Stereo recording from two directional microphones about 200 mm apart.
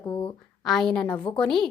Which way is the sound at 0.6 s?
Centre (ahead or behind).